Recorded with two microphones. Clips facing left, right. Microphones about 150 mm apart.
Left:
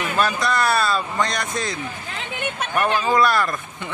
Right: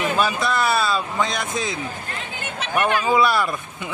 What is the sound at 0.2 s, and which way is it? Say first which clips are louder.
A man's voice: left 3 dB; centre (ahead or behind).